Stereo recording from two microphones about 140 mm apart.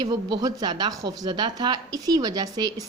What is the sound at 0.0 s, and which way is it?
Speech, 30° right (ahead or behind).